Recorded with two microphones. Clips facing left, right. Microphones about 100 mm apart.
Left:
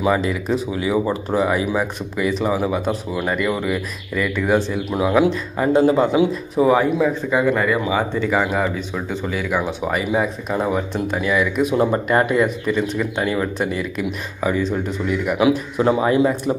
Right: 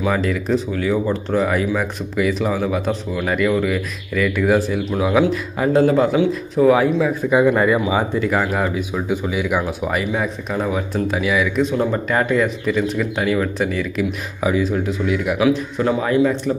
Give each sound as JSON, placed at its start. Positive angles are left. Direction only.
{"t": 0.0, "sound": "speech", "side_deg": 5}
{"t": 7.2, "sound": "speech", "side_deg": -15}
{"t": 8.2, "sound": "speech", "side_deg": 0}
{"t": 11.7, "sound": "a man's voice", "side_deg": 20}
{"t": 12.1, "sound": "speech", "side_deg": 5}
{"t": 15.8, "sound": "a man's voice", "side_deg": 20}